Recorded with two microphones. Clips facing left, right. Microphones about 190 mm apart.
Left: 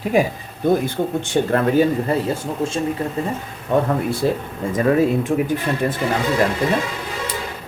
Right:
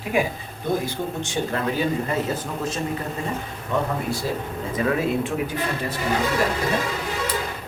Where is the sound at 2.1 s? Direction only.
30° left (ahead or behind).